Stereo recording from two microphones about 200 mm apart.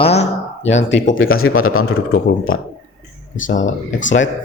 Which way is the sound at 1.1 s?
85° left.